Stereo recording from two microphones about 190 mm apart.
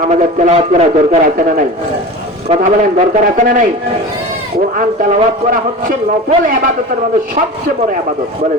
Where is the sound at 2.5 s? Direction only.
30° right (ahead or behind).